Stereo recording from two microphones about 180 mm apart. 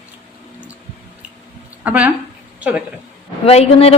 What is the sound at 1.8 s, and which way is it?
Speech, 10° right (ahead or behind).